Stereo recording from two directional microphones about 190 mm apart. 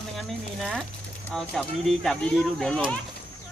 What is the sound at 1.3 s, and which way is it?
Speech, centre (ahead or behind).